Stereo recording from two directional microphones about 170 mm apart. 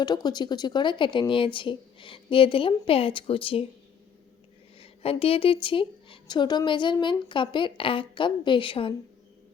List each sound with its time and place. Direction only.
0.0 s a woman's voice: 25° left (ahead or behind)
4.8 s a woman's voice: 35° left (ahead or behind)